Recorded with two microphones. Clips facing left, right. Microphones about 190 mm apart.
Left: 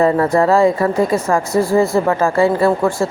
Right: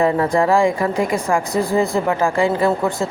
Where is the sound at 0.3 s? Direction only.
15° right (ahead or behind).